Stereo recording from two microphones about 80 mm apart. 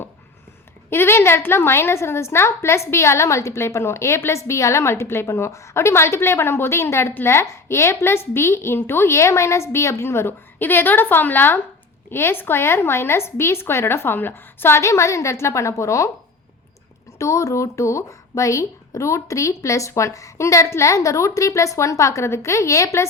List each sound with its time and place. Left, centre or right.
0.9 s a woman's voice: left
17.2 s a woman's voice: left